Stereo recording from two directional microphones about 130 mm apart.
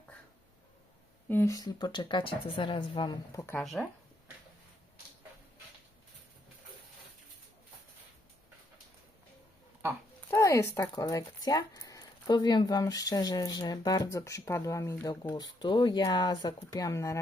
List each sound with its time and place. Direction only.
1.3 s speech: 15° left (ahead or behind)
1.5 s speech: 35° left (ahead or behind)
3.6 s speech: centre (ahead or behind)
10.2 s speech: 20° left (ahead or behind)